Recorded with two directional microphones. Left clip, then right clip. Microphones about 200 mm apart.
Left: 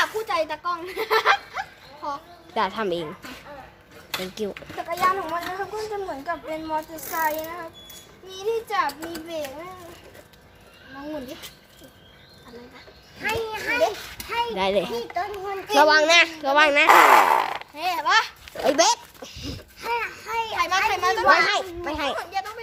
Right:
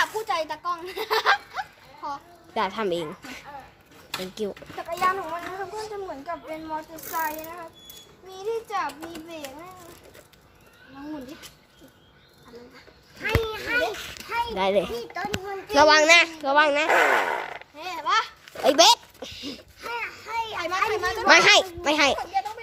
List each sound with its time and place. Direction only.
0.0 s a woman's voice: 30° right (ahead or behind); by 3.1 s 10° right (ahead or behind)
4.2 s speech: 5° right (ahead or behind)
13.2 s speech: 40° right (ahead or behind)
14.5 s a woman's voice: 15° right (ahead or behind)
16.1 s a woman's voice: 10° right (ahead or behind)
16.9 s fart: 45° left (ahead or behind)
17.7 s a child's voice: 25° left (ahead or behind)
18.5 s a child's voice: 20° right (ahead or behind)
20.0 s a child's voice: centre (ahead or behind)
20.6 s a child's voice: 55° left (ahead or behind)
21.2 s a child's voice: 55° right (ahead or behind)
21.9 s speech: 30° right (ahead or behind)